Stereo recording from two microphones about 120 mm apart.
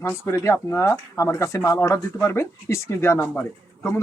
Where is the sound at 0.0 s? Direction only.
20° left (ahead or behind).